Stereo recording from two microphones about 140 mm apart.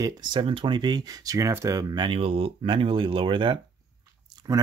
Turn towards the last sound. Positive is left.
turn(degrees=-25)  # may be behind; listen again after turning